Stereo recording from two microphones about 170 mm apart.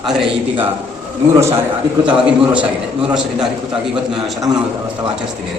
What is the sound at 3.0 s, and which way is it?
A man's voice, 5° right (ahead or behind).